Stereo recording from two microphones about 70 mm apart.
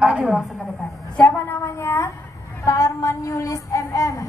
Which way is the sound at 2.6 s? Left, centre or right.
Left.